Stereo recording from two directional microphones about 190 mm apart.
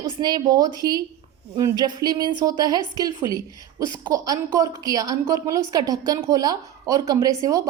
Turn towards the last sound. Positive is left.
turn(degrees=-20)  # may be behind; listen again after turning